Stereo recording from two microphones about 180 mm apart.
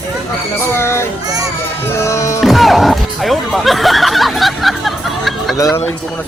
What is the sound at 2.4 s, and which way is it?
Speech, centre (ahead or behind).